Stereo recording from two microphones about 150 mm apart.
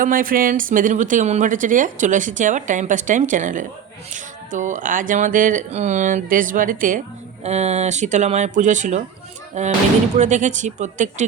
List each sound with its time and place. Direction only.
0.0 s speech: 65° right (ahead or behind)
7.4 s speech: 45° right (ahead or behind)